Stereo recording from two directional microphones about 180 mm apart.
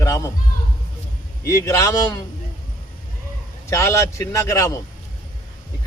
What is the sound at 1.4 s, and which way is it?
Speech, 15° left (ahead or behind).